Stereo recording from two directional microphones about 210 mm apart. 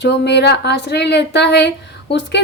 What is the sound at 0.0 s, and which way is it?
A woman's voice, 55° left (ahead or behind).